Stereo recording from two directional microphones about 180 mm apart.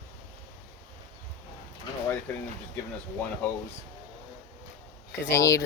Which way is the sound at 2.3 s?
10° left (ahead or behind).